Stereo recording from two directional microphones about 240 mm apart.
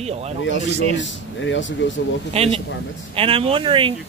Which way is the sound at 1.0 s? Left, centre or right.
Left.